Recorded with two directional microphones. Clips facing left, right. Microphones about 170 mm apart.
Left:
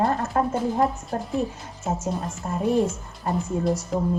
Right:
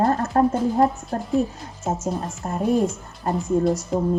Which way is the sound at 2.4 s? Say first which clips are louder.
Right 1 dB; 45° right (ahead or behind).